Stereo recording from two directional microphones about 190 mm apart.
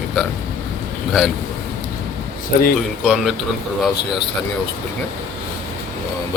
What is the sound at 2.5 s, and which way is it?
Speech, 50° left (ahead or behind).